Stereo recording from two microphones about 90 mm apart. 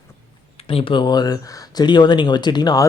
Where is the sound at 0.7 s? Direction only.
75° left (ahead or behind).